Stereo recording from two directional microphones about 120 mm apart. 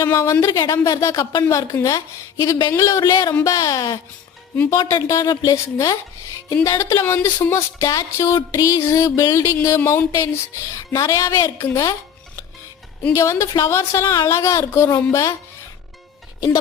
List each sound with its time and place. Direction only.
0.0 s a woman's voice: 25° left (ahead or behind)
0.3 s a woman's voice: 35° left (ahead or behind)
13.1 s a woman's voice: 25° left (ahead or behind)